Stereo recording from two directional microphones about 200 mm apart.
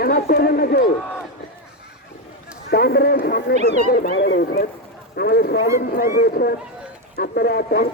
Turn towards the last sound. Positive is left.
turn(degrees=50)  # may be behind; listen again after turning